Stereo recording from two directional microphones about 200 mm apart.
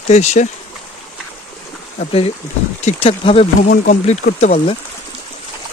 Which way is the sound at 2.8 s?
30° left (ahead or behind).